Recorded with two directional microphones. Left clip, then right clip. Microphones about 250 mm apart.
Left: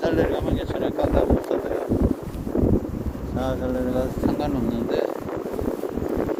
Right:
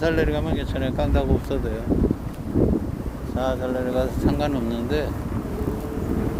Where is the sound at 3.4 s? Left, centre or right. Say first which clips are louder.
Right 1 dB; right.